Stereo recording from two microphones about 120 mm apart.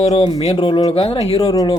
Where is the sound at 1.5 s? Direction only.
30° left (ahead or behind).